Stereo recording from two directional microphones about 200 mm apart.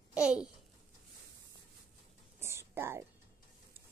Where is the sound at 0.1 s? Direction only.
5° right (ahead or behind).